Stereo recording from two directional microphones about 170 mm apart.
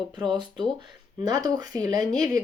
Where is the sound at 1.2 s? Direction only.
25° right (ahead or behind).